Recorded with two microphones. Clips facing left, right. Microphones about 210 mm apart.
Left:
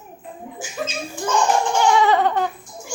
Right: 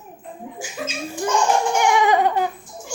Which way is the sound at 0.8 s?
10° right (ahead or behind).